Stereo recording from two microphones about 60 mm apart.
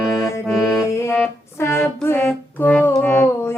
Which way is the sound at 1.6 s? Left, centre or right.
Left.